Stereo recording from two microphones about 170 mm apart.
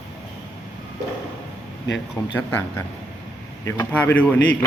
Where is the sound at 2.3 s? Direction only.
10° left (ahead or behind).